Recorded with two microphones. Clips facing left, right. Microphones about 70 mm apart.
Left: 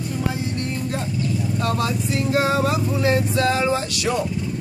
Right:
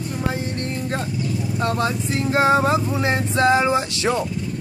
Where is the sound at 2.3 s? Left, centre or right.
Right.